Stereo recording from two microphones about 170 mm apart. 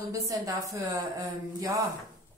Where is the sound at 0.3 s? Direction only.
20° right (ahead or behind).